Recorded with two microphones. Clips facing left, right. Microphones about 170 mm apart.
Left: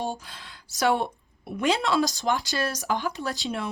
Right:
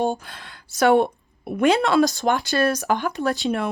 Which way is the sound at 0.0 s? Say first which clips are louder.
Right 8 dB; 55° right (ahead or behind).